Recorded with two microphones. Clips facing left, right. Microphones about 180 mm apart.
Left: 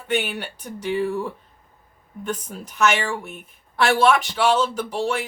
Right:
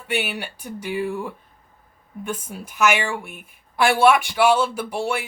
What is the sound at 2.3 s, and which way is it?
A woman's voice, 10° right (ahead or behind).